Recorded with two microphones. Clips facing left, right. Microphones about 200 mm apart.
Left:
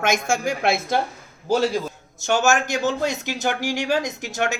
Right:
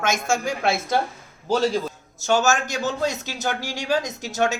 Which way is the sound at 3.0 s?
15° left (ahead or behind).